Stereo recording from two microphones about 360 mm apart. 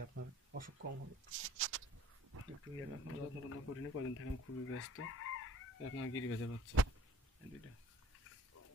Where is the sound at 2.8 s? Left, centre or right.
Left.